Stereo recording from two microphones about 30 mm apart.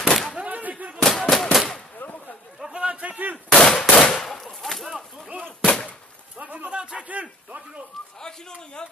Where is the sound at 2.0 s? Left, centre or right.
Left.